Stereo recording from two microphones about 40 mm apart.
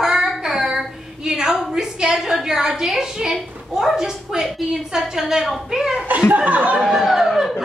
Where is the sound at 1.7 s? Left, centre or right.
Centre.